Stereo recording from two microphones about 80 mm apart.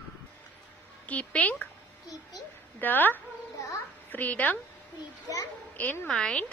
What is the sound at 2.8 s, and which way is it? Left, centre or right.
A woman's voice, left.